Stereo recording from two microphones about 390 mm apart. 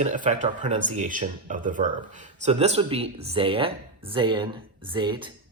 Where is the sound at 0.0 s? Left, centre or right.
Centre.